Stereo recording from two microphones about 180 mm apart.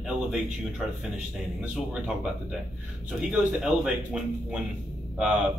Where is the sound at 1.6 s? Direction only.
5° right (ahead or behind).